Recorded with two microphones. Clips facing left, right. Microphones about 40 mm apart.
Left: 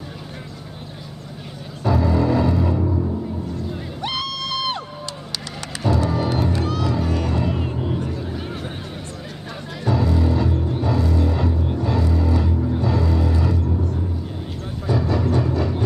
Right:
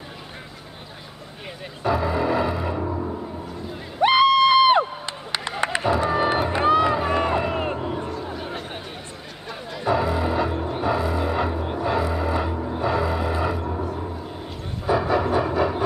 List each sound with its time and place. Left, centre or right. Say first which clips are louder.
1.8 s music: left 2 dB; centre
8.1 s a sound: left 1 dB; centre
9.8 s music: left 1 dB; centre
14.9 s music: right 1 dB; centre